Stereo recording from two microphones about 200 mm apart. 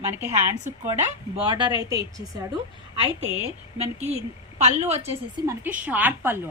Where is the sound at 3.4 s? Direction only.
30° right (ahead or behind).